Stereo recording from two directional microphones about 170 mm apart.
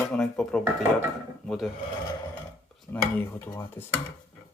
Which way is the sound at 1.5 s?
Centre (ahead or behind).